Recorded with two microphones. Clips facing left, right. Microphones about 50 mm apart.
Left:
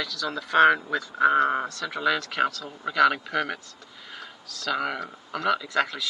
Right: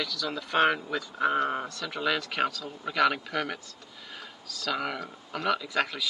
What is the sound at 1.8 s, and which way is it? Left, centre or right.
Speech, centre.